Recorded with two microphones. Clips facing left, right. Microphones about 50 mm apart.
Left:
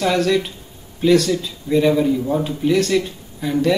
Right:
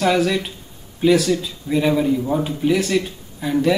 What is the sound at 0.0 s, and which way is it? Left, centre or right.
Speech, centre.